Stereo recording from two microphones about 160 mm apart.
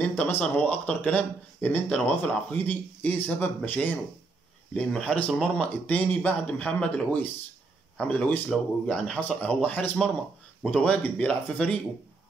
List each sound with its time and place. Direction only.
0.0 s speech: 10° left (ahead or behind)